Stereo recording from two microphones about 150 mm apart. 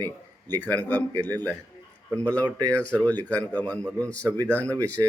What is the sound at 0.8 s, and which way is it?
Speech, 10° left (ahead or behind).